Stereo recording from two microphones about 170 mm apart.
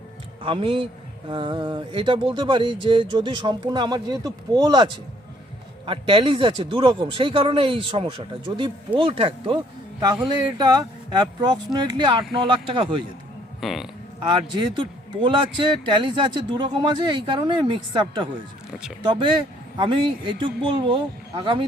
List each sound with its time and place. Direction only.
0.4 s a man's voice: 30° right (ahead or behind)
13.6 s speech: centre (ahead or behind)
14.3 s a man's voice: 25° right (ahead or behind)